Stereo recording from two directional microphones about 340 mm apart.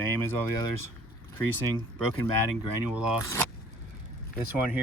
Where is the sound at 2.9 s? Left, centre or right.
Centre.